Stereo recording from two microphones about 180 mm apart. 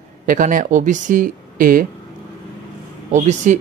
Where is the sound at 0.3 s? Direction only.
50° right (ahead or behind).